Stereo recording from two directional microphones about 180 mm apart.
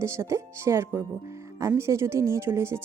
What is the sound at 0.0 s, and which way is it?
Speech, 15° right (ahead or behind).